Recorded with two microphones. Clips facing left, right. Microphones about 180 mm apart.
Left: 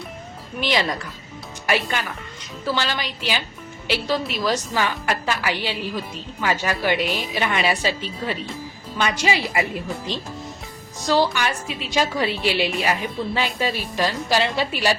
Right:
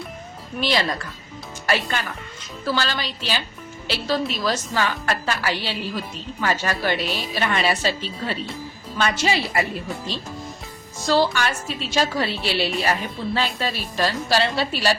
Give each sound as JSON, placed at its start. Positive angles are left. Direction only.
{"t": 0.6, "sound": "a woman's voice", "side_deg": 15}